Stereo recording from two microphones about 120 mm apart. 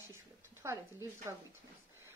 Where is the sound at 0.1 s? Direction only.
20° right (ahead or behind).